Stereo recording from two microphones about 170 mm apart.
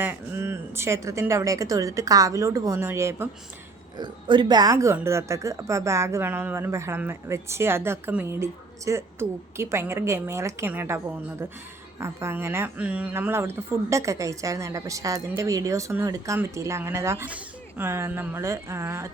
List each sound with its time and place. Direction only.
0.0 s a woman's voice: 15° right (ahead or behind)